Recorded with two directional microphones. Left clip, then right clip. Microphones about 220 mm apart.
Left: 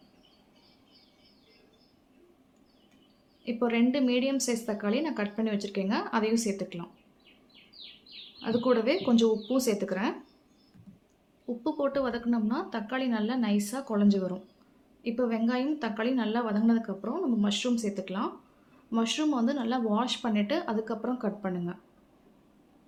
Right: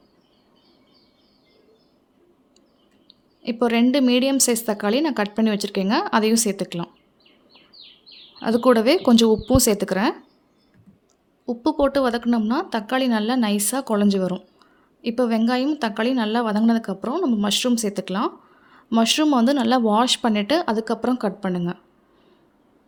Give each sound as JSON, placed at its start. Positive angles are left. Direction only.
{"t": 3.4, "sound": "a woman's voice", "side_deg": -50}
{"t": 8.4, "sound": "a woman's voice", "side_deg": -50}
{"t": 11.4, "sound": "a woman's voice", "side_deg": -50}